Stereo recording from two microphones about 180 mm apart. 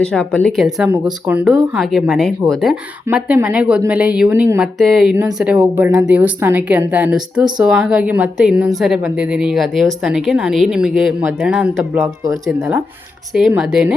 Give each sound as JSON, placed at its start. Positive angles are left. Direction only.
{"t": 0.0, "sound": "a woman's voice", "side_deg": 5}